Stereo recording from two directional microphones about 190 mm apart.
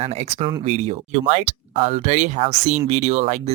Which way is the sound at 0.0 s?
35° right (ahead or behind).